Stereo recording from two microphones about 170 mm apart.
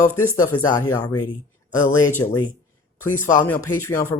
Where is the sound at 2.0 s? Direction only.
15° left (ahead or behind).